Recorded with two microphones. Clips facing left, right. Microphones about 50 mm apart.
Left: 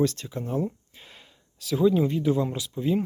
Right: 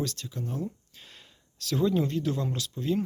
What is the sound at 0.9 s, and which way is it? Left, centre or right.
Speech, centre.